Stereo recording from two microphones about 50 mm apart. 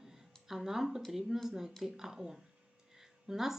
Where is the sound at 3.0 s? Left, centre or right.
Centre.